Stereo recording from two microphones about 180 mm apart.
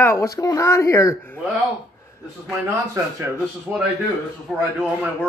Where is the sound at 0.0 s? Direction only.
15° left (ahead or behind).